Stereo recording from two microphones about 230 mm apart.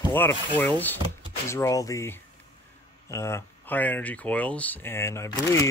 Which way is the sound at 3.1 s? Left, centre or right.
Centre.